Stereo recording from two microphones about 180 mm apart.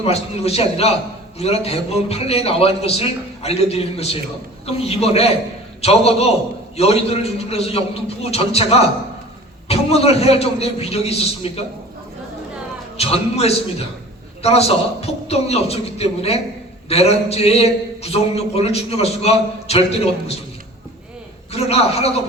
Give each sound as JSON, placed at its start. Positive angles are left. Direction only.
{"t": 0.0, "sound": "a man's voice", "side_deg": 35}
{"t": 13.0, "sound": "a man's voice", "side_deg": 35}
{"t": 21.5, "sound": "a man's voice", "side_deg": 35}